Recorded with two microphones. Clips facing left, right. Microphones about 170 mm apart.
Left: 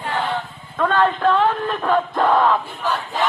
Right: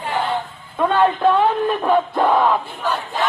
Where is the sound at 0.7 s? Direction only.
15° right (ahead or behind).